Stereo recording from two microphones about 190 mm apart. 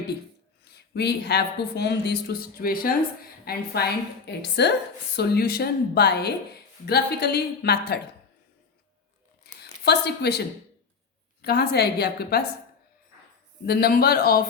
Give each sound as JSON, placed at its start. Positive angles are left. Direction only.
{"t": 0.6, "sound": "speech", "side_deg": 60}
{"t": 9.4, "sound": "a sound", "side_deg": 60}
{"t": 11.4, "sound": "speech", "side_deg": 55}
{"t": 13.7, "sound": "speech", "side_deg": 55}